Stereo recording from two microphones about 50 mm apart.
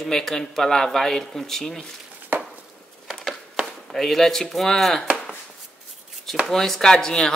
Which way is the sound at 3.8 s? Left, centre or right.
Centre.